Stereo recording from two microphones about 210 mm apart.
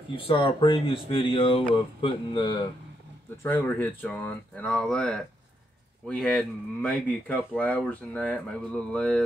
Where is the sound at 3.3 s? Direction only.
10° left (ahead or behind).